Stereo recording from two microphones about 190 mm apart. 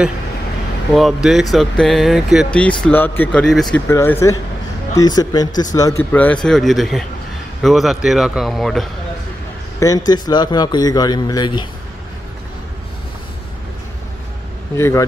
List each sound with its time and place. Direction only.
0.9 s speech: centre (ahead or behind)
3.9 s a man's voice: 15° left (ahead or behind)
9.8 s a man's voice: 20° left (ahead or behind)
14.8 s speech: 15° left (ahead or behind)